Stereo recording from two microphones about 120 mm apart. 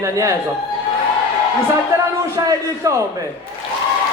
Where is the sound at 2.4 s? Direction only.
25° right (ahead or behind).